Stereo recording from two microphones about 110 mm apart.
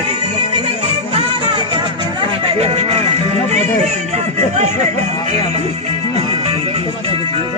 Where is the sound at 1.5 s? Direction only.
45° right (ahead or behind); by 5.4 s 90° right.